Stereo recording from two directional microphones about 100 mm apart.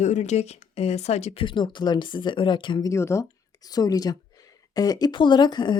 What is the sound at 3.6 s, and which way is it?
Speech, 40° left (ahead or behind).